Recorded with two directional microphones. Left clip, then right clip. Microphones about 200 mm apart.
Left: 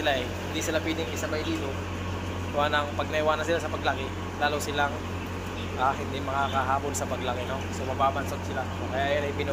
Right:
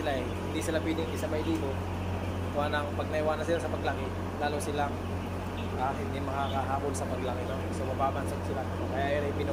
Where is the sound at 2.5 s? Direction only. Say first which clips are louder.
Left 6 dB; centre (ahead or behind).